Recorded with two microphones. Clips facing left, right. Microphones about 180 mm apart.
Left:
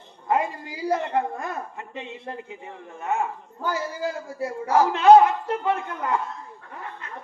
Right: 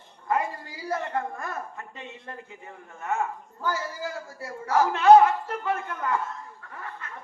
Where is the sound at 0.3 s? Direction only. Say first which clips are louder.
Left 3 dB; 20° left (ahead or behind).